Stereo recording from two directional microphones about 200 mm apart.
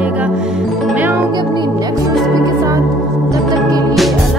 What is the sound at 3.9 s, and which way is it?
Music, centre (ahead or behind).